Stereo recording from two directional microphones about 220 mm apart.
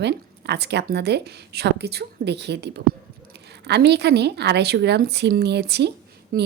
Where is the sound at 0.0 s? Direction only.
50° right (ahead or behind).